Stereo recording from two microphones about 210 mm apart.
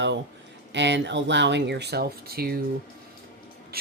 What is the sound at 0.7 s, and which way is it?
Speech, 55° right (ahead or behind).